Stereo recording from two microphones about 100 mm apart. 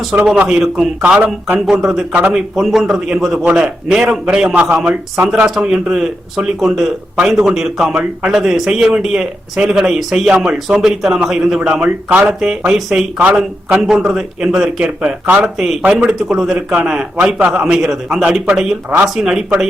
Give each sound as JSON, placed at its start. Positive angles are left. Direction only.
{"t": 0.3, "sound": "a man's voice", "side_deg": -5}
{"t": 1.5, "sound": "a man's voice", "side_deg": -5}
{"t": 2.1, "sound": "a man's voice", "side_deg": -15}
{"t": 2.6, "sound": "a man's voice", "side_deg": 0}
{"t": 7.2, "sound": "a man's voice", "side_deg": -10}